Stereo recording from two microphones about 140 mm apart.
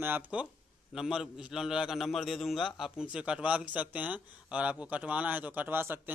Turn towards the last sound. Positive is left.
turn(degrees=-15)  # may be behind; listen again after turning